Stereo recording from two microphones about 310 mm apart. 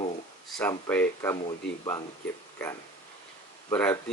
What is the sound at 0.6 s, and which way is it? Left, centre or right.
Speech, centre.